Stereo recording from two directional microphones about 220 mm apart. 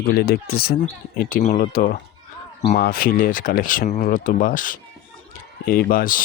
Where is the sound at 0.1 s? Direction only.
45° left (ahead or behind).